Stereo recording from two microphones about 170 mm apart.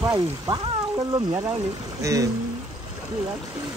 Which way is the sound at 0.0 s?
20° right (ahead or behind).